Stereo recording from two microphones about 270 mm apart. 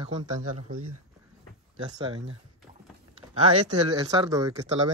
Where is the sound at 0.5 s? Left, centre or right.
Right.